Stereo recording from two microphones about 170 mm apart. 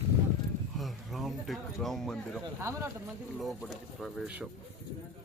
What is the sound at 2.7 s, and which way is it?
Speech, 20° right (ahead or behind).